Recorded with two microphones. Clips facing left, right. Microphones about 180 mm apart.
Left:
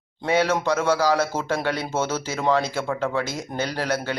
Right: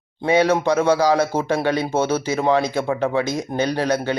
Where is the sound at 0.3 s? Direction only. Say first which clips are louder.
Right 4 dB; 15° right (ahead or behind).